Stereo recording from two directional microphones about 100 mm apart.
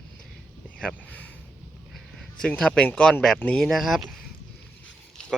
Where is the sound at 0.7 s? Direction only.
15° left (ahead or behind).